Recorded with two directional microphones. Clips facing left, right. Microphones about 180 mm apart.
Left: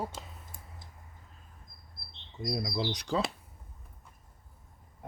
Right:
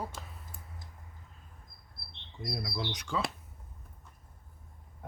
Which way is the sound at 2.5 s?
30° left (ahead or behind).